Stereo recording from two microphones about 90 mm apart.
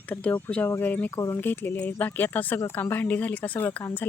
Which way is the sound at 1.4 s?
20° left (ahead or behind).